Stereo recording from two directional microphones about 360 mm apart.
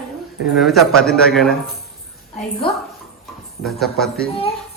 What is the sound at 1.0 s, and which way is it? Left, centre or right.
Speech, left.